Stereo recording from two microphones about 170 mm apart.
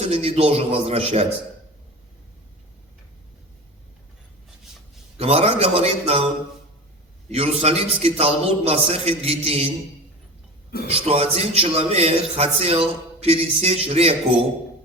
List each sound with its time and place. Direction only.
0.0 s a man's voice: 35° right (ahead or behind)
5.1 s a man's voice: 35° right (ahead or behind)
10.8 s a man's voice: 35° right (ahead or behind)